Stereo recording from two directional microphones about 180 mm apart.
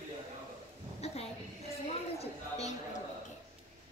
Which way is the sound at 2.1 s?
35° left (ahead or behind).